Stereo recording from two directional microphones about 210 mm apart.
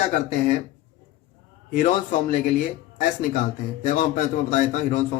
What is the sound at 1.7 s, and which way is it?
Speech, 40° left (ahead or behind).